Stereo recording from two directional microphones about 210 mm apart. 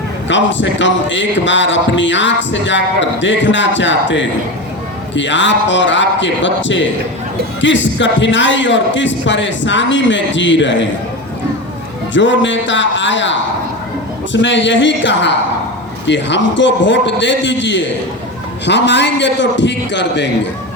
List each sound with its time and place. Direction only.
0.3 s a man's voice: 60° left (ahead or behind)
12.1 s a man's voice: 60° left (ahead or behind)
14.4 s a man's voice: 60° left (ahead or behind)